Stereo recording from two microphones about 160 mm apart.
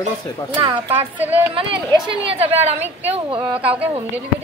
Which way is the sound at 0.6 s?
20° right (ahead or behind).